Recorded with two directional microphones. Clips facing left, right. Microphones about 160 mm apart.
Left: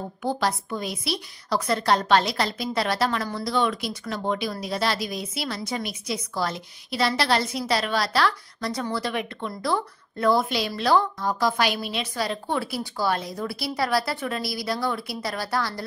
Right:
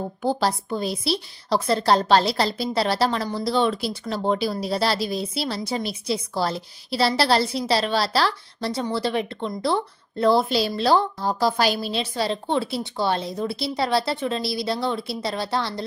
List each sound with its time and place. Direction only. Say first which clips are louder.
0.2 s a woman's voice: right 2 dB; 30° right (ahead or behind)